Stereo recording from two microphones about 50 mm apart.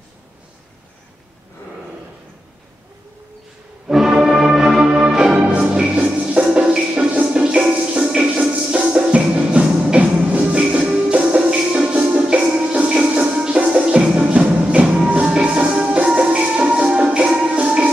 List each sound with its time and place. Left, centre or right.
3.9 s music: centre